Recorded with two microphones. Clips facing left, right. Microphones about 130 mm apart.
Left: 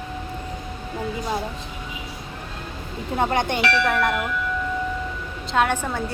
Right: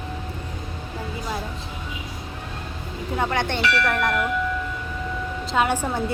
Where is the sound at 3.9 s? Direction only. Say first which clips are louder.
Left 1 dB; centre (ahead or behind).